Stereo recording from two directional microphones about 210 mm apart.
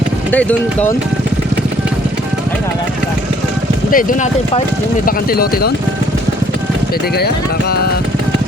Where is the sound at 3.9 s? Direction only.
35° left (ahead or behind).